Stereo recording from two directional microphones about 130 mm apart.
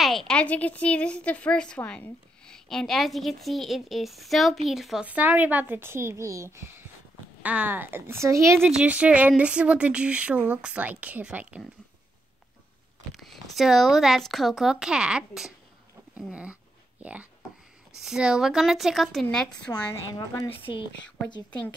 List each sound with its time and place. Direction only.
0.0 s a woman's voice: centre (ahead or behind); by 8.6 s 20° right (ahead or behind)
8.6 s speech: 10° right (ahead or behind)
13.1 s a woman's voice: centre (ahead or behind)
19.9 s a woman's voice: 20° left (ahead or behind)
20.6 s speech: 40° left (ahead or behind)